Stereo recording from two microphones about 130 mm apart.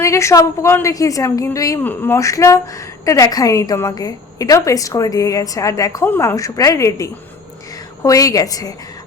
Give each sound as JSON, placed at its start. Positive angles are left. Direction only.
{"t": 0.0, "sound": "a woman's voice", "side_deg": 20}
{"t": 1.8, "sound": "a woman's voice", "side_deg": 15}